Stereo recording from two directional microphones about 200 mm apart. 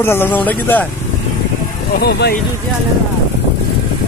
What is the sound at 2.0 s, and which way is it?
Speech, 55° left (ahead or behind).